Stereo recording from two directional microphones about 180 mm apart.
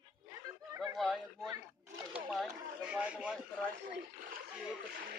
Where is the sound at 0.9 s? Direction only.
Centre (ahead or behind).